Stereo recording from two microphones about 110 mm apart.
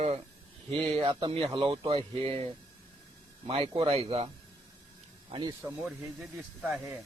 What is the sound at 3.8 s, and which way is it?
Speech, 60° right (ahead or behind).